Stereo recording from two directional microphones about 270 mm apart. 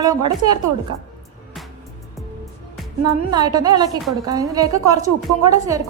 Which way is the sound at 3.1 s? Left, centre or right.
Centre.